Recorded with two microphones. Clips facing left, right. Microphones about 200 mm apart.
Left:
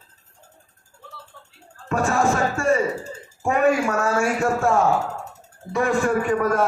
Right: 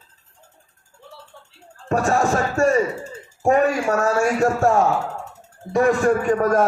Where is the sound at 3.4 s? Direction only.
40° right (ahead or behind).